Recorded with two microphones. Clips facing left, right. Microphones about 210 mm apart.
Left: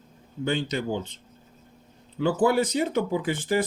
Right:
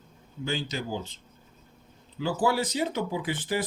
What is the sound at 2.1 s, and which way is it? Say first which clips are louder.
Speech: left 5 dB; 60° left (ahead or behind).